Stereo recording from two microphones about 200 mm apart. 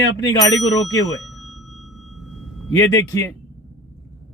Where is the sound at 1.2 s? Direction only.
Centre (ahead or behind).